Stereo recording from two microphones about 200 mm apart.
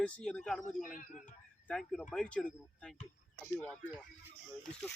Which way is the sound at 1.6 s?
5° left (ahead or behind).